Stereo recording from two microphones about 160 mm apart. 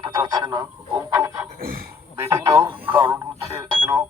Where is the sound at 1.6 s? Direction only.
65° right (ahead or behind).